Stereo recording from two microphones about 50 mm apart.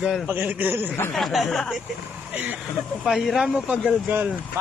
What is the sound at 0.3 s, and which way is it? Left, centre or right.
Speech, right.